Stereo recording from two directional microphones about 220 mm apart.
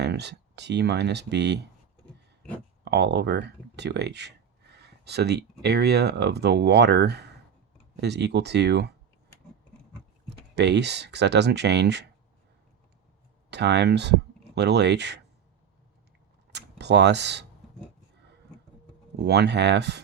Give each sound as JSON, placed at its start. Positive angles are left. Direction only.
{"t": 0.0, "sound": "speech", "side_deg": -50}
{"t": 2.8, "sound": "speech", "side_deg": -50}
{"t": 10.2, "sound": "speech", "side_deg": -50}
{"t": 13.5, "sound": "speech", "side_deg": -50}
{"t": 16.5, "sound": "speech", "side_deg": -50}
{"t": 19.2, "sound": "speech", "side_deg": -50}